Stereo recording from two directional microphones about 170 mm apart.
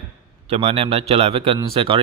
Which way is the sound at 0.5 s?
35° right (ahead or behind).